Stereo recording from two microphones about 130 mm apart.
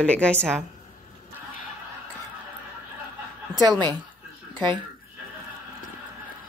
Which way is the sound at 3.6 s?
35° right (ahead or behind).